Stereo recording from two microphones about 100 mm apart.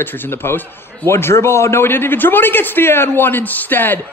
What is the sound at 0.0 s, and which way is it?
A man's voice, 20° left (ahead or behind).